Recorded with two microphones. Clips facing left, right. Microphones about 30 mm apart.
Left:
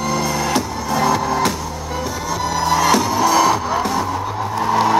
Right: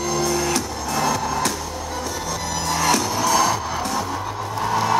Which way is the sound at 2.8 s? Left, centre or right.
Centre.